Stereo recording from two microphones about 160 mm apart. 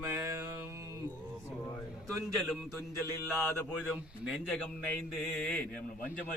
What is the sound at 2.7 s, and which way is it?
Mantra, 20° right (ahead or behind).